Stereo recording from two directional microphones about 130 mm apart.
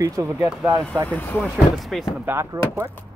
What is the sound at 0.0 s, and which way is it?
Speech, 25° right (ahead or behind).